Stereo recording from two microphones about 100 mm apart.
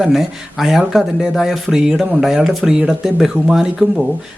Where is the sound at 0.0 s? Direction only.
Centre (ahead or behind).